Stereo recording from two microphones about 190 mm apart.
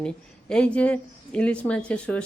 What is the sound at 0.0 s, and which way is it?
A woman's voice, 5° left (ahead or behind).